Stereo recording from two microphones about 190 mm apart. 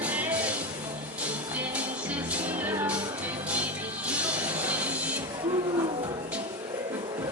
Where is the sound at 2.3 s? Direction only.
10° right (ahead or behind).